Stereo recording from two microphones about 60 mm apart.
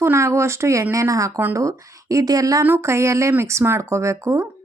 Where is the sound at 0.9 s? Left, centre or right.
Right.